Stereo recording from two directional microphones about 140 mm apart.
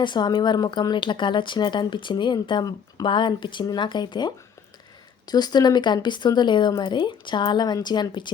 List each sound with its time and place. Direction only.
0.0 s speech: 30° left (ahead or behind)